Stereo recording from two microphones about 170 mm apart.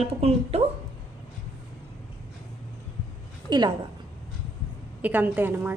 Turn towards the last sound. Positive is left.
turn(degrees=-10)  # may be behind; listen again after turning